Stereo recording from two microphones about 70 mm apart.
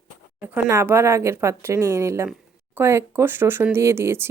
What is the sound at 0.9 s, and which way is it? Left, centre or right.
Speech, right.